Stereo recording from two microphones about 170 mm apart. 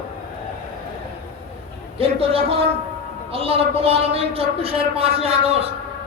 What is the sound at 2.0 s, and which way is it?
A man's voice, 35° right (ahead or behind).